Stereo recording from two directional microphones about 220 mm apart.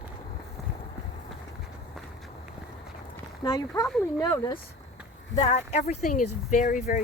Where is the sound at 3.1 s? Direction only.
15° left (ahead or behind).